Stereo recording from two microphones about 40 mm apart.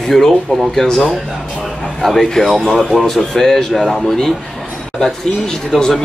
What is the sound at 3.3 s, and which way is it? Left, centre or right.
Speech, centre.